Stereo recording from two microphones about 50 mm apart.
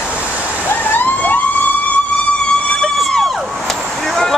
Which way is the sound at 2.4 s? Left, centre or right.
Left.